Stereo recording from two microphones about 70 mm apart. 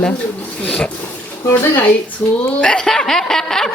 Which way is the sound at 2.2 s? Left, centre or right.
Left.